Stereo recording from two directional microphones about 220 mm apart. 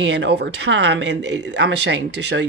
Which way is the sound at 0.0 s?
55° right (ahead or behind).